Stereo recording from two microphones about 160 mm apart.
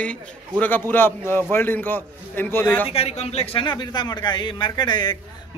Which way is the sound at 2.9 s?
40° left (ahead or behind).